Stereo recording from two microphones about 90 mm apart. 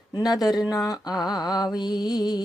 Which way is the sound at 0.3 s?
45° left (ahead or behind).